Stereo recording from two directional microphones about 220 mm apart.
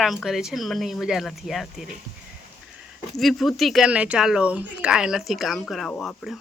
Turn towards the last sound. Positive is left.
turn(degrees=0)  # may be behind; listen again after turning